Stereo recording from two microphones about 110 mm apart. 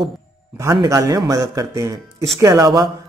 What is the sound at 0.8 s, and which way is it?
Speech, 30° right (ahead or behind).